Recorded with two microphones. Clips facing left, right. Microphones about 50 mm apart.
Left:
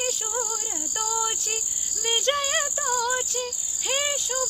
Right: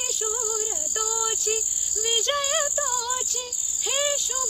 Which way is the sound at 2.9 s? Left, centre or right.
Left.